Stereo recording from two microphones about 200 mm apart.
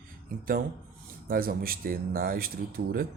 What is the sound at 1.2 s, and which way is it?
A man's voice, 45° right (ahead or behind).